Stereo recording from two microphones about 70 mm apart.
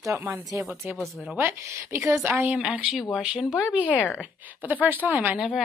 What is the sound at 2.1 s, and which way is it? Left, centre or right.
Speech, right.